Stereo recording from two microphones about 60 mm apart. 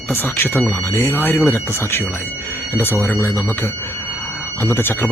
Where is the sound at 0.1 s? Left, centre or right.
Left.